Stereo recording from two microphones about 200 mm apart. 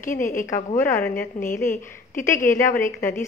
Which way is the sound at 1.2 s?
45° left (ahead or behind).